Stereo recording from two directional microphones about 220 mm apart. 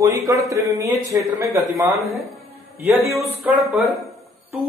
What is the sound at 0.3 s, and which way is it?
Speech, 15° right (ahead or behind).